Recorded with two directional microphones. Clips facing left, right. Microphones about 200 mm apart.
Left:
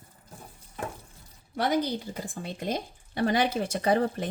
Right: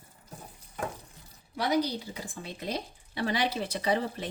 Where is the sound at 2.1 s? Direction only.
50° left (ahead or behind).